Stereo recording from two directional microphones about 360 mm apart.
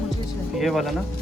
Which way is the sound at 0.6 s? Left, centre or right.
Centre.